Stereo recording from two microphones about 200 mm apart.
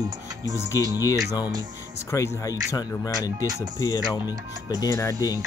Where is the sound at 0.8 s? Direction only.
20° right (ahead or behind).